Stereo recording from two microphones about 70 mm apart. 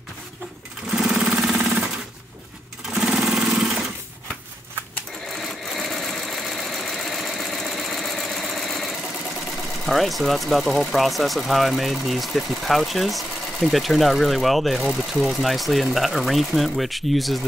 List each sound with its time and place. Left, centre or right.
0.9 s a sound: centre
2.9 s vehicle: centre
5.3 s sewing machine: centre
9.8 s speech: centre